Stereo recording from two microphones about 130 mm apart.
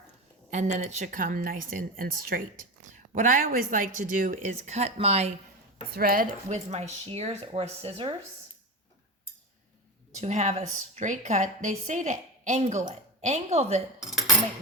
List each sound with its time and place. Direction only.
0.5 s speech: 65° right (ahead or behind)
6.1 s speech: 75° right (ahead or behind); by 8.1 s 45° right (ahead or behind)
10.2 s a woman's voice: 60° right (ahead or behind)
10.7 s a woman's voice: 70° right (ahead or behind); by 13.8 s 55° right (ahead or behind)
14.0 s cutlery: centre (ahead or behind)